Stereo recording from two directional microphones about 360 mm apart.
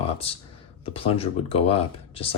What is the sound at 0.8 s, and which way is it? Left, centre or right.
Speech, centre.